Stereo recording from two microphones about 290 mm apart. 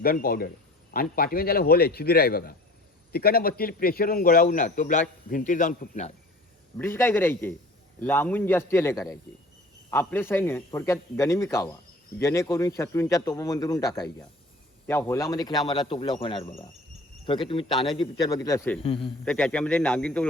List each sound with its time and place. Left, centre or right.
0.0 s a man's voice: left
6.7 s a man's voice: centre